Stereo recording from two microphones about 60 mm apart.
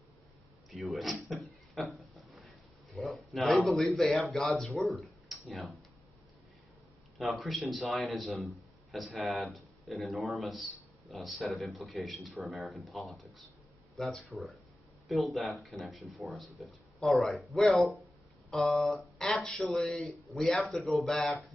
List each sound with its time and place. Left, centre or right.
0.7 s a sound: centre
3.7 s speech: centre
4.7 s tick-tock: centre
7.2 s speech: centre